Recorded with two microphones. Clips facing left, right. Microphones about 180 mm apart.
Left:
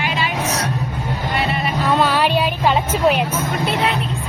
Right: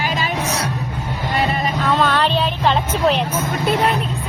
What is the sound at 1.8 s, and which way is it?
Vehicle, 10° left (ahead or behind).